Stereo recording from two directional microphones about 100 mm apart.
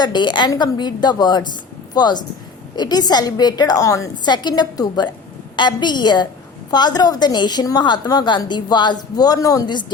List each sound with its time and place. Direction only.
0.0 s a woman's voice: 50° left (ahead or behind)
4.3 s a woman's voice: 45° left (ahead or behind)